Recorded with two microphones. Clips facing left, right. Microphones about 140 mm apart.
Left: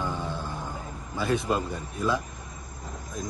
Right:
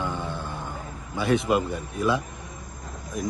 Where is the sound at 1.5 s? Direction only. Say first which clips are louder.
Right 4 dB; 20° right (ahead or behind).